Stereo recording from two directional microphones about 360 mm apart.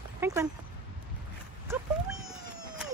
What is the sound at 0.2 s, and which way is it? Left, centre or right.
Speech, centre.